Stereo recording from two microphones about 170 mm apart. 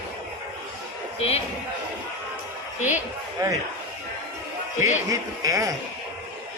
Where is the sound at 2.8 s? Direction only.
45° left (ahead or behind).